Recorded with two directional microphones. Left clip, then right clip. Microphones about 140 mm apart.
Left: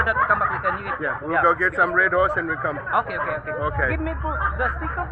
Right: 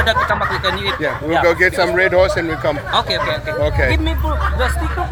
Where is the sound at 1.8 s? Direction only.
35° right (ahead or behind).